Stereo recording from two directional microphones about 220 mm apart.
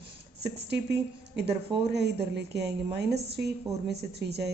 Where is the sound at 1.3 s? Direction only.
50° right (ahead or behind).